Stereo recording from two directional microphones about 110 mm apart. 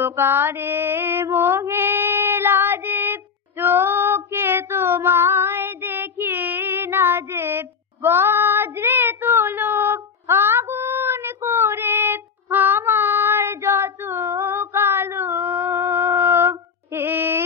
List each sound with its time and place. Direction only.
0.0 s mantra: 20° right (ahead or behind)